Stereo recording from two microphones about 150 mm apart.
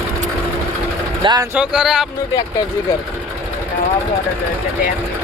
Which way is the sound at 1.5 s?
5° right (ahead or behind).